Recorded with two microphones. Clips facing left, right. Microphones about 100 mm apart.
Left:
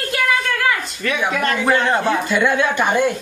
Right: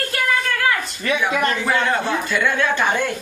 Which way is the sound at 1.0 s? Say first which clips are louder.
Even; 20° right (ahead or behind).